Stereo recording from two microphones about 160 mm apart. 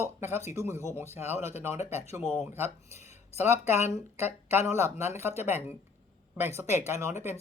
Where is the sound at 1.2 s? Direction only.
45° left (ahead or behind).